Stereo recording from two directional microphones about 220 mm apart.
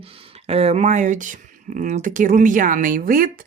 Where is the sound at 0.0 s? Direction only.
25° right (ahead or behind).